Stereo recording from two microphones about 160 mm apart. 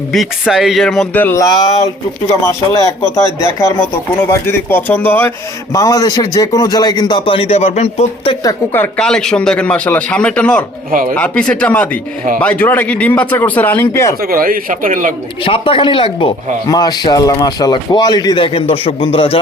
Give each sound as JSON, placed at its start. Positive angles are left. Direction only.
{"t": 0.1, "sound": "speech", "side_deg": 0}
{"t": 8.4, "sound": "speech", "side_deg": 15}
{"t": 14.2, "sound": "speech", "side_deg": -65}
{"t": 15.4, "sound": "speech", "side_deg": 35}